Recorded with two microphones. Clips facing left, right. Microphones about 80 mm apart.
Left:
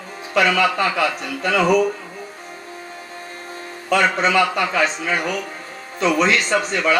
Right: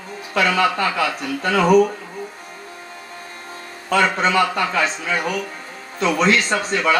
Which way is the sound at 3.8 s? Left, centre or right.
Right.